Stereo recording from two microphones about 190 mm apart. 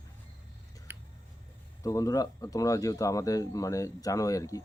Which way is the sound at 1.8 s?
15° left (ahead or behind).